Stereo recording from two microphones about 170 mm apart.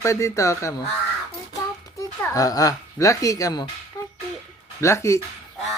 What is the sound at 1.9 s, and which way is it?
Speech, 20° left (ahead or behind).